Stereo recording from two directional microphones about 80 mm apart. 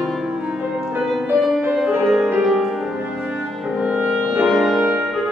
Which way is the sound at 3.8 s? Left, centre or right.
Centre.